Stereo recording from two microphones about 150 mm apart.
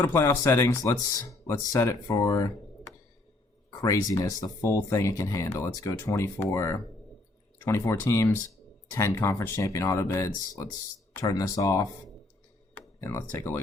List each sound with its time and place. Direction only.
0.0 s speech: 15° left (ahead or behind)
3.8 s speech: 20° left (ahead or behind)
13.0 s speech: 20° left (ahead or behind)